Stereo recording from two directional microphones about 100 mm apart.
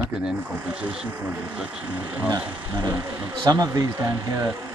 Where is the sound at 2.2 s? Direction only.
40° right (ahead or behind).